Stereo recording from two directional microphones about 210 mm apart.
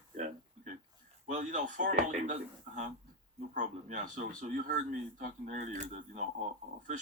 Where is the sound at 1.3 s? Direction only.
35° right (ahead or behind).